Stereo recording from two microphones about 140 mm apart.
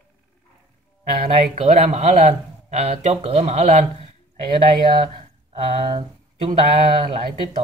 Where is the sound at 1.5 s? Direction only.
50° right (ahead or behind).